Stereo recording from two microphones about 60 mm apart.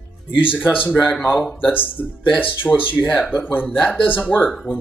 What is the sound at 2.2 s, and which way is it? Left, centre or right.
Speech, left.